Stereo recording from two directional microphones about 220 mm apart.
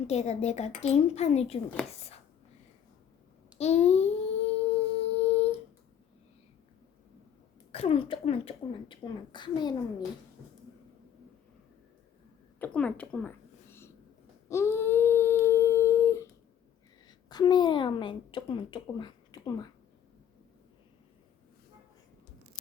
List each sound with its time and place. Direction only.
0.1 s speech: 30° left (ahead or behind)
3.6 s a child's voice: 30° left (ahead or behind)
5.0 s a sound: 30° left (ahead or behind)
7.7 s speech: 25° left (ahead or behind)
12.5 s a sound: 5° left (ahead or behind)
17.1 s a woman's voice: 20° left (ahead or behind)